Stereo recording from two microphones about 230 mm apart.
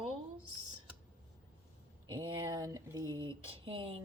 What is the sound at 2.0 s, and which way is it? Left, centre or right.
Speech, centre.